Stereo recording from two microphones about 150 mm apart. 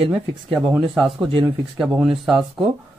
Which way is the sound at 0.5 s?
5° right (ahead or behind).